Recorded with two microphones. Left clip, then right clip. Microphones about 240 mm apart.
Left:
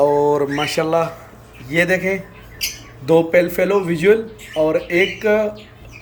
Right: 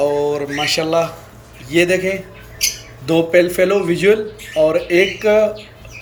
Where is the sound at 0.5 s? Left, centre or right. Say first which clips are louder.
Right 1 dB; centre.